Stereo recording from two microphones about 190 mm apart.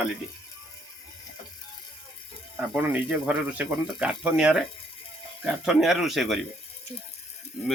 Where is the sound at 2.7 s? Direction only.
10° right (ahead or behind).